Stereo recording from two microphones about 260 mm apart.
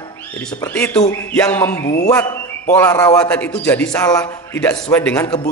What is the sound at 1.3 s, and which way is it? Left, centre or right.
Speech, centre.